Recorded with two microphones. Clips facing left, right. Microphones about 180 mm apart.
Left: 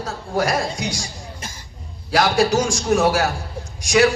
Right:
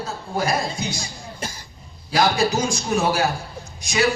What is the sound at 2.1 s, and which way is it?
A man's voice, 90° left.